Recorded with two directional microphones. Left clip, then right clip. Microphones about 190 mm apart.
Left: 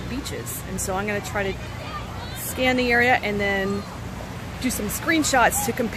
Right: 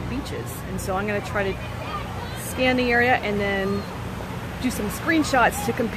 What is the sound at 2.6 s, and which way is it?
Speech, 20° left (ahead or behind).